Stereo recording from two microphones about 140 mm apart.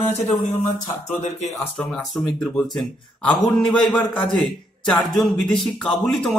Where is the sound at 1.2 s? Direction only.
55° left (ahead or behind).